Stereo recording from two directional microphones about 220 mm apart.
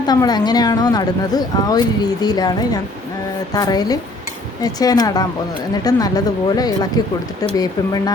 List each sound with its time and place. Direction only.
0.1 s speech: 20° left (ahead or behind)